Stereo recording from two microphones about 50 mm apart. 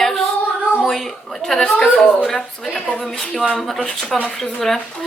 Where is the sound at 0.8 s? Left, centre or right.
Centre.